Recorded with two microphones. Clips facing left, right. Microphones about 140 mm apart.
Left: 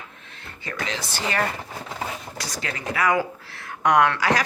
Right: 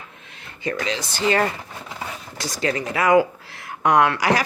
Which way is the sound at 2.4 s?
25° right (ahead or behind).